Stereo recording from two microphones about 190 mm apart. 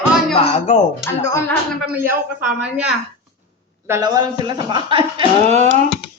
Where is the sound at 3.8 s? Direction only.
15° right (ahead or behind); by 5.8 s 35° right (ahead or behind).